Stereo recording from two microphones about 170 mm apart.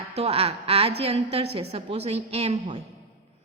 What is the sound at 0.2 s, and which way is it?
A woman's voice, 35° right (ahead or behind).